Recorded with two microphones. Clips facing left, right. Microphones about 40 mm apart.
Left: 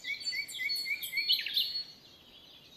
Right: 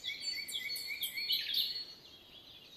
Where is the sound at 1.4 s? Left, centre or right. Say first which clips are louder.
Left 3 dB; left.